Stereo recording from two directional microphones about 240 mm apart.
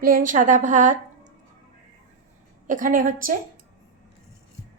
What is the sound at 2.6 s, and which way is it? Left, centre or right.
Speech, right.